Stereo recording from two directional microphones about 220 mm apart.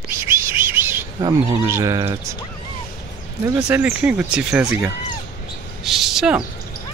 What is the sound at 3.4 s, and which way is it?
Speech, 10° right (ahead or behind).